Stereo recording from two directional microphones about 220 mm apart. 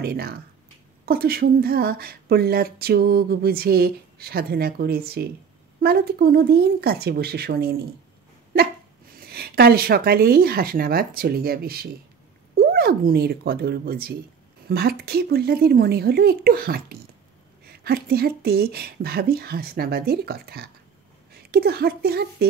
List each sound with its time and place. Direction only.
0.0 s speech: 45° right (ahead or behind)
9.1 s a woman's voice: 45° right (ahead or behind)